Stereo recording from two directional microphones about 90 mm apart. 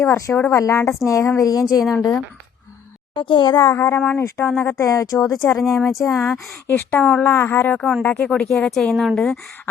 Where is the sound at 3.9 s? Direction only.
20° left (ahead or behind); by 5.2 s 40° left (ahead or behind).